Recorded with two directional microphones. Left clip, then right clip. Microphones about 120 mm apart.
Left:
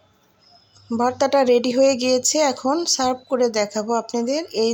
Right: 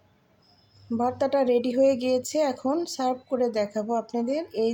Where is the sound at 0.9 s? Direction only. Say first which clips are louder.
Left 6 dB; 10° left (ahead or behind).